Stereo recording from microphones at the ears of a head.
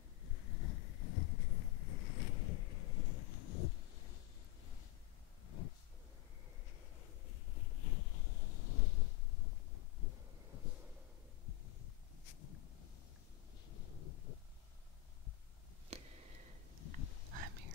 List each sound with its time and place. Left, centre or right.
0.2 s boat: left
7.0 s boat: left
9.9 s wind noise: left
11.4 s heart sounds: left
13.7 s a sound: left
16.7 s a sound: left
17.3 s whispering: right